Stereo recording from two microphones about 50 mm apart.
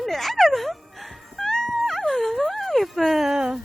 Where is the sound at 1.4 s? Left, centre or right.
Centre.